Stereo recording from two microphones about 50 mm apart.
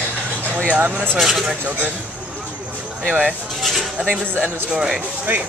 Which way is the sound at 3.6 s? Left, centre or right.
Centre.